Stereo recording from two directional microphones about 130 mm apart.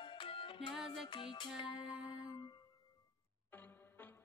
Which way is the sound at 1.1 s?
40° left (ahead or behind).